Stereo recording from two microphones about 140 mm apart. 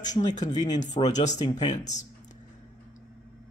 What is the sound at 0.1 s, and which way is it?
Speech, 60° left (ahead or behind).